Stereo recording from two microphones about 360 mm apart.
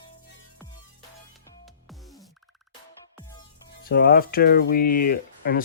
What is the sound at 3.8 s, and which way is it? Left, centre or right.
Speech, left.